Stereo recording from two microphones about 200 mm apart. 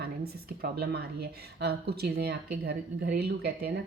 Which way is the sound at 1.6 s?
50° right (ahead or behind).